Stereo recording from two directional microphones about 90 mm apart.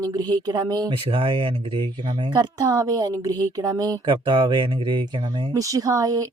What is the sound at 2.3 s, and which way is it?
Speech, 50° right (ahead or behind).